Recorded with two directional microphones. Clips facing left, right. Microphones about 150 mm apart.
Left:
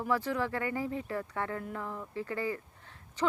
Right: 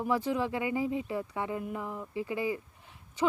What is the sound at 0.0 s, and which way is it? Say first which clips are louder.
Speech: right 2 dB; 15° right (ahead or behind).